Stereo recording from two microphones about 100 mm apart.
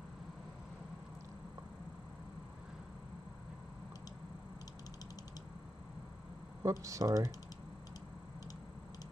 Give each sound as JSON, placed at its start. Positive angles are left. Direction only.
{"t": 6.6, "sound": "speech", "side_deg": -30}